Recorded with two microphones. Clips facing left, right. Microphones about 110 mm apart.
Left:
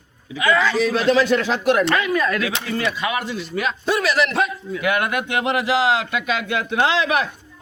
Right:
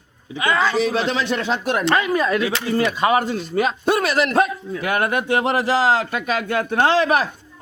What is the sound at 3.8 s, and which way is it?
A man's voice, 50° right (ahead or behind).